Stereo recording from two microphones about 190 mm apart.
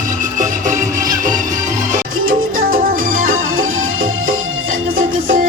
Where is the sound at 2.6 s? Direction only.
50° right (ahead or behind).